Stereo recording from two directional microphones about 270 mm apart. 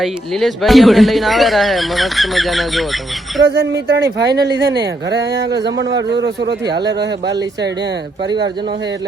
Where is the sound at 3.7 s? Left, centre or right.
Right.